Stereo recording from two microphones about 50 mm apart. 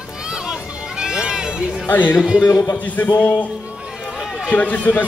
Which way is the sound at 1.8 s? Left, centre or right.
Left.